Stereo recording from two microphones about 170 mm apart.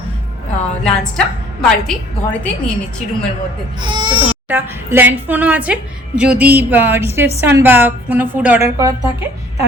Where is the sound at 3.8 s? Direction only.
30° right (ahead or behind).